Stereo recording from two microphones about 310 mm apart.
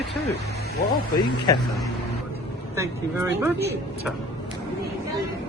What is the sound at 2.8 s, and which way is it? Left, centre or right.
Speech, centre.